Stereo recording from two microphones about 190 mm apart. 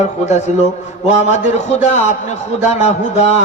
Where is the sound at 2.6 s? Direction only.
40° left (ahead or behind).